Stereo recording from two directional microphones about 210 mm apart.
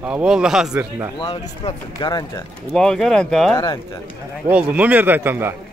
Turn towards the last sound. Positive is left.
turn(degrees=-10)  # may be behind; listen again after turning